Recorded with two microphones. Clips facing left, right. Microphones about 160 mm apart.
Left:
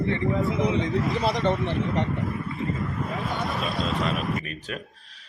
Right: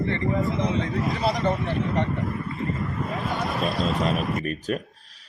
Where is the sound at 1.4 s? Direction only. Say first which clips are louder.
Left 1 dB; 20° left (ahead or behind).